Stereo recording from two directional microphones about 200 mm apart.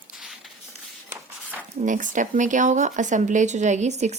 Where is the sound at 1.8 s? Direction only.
40° right (ahead or behind).